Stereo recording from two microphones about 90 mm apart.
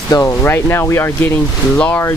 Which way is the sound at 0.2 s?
25° left (ahead or behind).